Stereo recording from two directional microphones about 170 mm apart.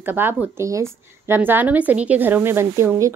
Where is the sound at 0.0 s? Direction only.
10° right (ahead or behind).